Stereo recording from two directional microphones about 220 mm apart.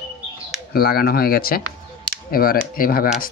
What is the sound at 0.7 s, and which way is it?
Speech, 45° left (ahead or behind).